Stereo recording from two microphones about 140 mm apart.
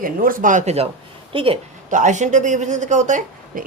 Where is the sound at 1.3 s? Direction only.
40° right (ahead or behind).